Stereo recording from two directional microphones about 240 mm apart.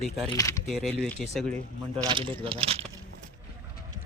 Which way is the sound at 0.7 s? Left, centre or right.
Centre.